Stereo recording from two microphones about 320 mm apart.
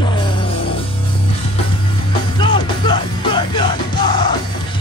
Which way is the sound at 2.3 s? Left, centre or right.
Centre.